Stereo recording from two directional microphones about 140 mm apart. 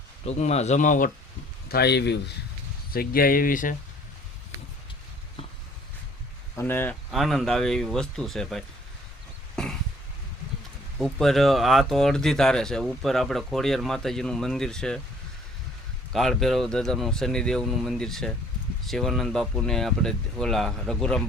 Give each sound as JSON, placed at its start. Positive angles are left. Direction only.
{"t": 0.3, "sound": "speech", "side_deg": 50}
{"t": 2.9, "sound": "speech", "side_deg": 90}
{"t": 6.6, "sound": "speech", "side_deg": 15}
{"t": 7.1, "sound": "speech", "side_deg": 0}
{"t": 9.6, "sound": "a sound", "side_deg": 5}
{"t": 10.9, "sound": "speech", "side_deg": 0}
{"t": 16.1, "sound": "speech", "side_deg": 0}